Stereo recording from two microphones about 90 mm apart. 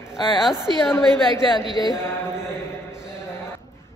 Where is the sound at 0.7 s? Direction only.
65° right (ahead or behind).